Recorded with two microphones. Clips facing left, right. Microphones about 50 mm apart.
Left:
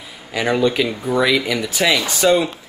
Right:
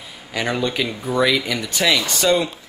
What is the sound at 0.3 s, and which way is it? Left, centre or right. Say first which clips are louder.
Speech: left 5 dB; centre.